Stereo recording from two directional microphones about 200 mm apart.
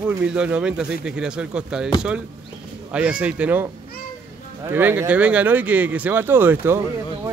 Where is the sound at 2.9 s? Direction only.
5° right (ahead or behind).